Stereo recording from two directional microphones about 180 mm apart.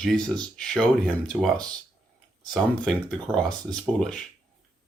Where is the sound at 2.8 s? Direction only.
5° left (ahead or behind).